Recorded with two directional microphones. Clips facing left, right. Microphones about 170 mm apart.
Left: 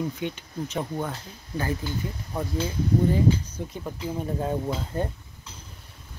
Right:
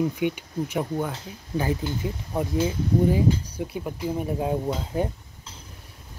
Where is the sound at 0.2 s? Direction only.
10° right (ahead or behind).